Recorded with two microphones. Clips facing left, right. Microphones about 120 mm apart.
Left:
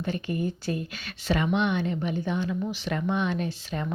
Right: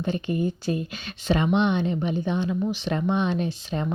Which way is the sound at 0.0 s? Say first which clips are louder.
Right 3 dB; 20° right (ahead or behind).